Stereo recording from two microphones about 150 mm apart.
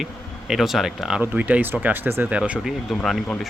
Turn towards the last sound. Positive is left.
turn(degrees=0)  # may be behind; listen again after turning